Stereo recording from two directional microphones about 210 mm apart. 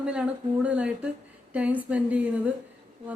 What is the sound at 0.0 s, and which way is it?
A woman's voice, 5° right (ahead or behind).